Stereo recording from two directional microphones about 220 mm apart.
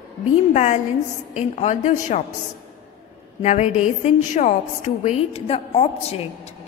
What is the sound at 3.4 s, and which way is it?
A woman's voice, 30° left (ahead or behind).